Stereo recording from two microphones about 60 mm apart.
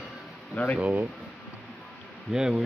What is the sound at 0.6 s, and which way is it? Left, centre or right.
Speech, left.